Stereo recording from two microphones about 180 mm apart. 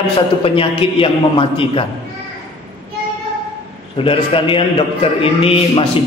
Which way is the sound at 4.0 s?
30° left (ahead or behind).